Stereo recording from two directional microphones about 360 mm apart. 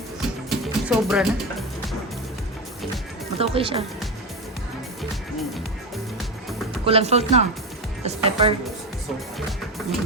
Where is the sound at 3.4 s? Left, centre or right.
Centre.